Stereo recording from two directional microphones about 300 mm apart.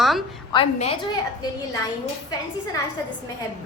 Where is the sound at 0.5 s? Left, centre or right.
Centre.